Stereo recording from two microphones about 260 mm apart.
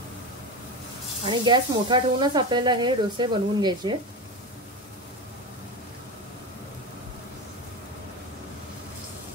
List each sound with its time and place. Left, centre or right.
1.2 s speech: centre